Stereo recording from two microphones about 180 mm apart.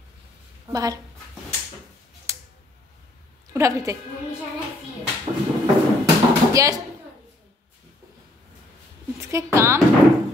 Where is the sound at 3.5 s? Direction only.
15° right (ahead or behind).